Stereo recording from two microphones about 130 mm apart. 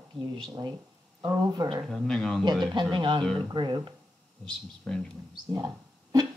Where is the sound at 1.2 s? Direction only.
30° right (ahead or behind).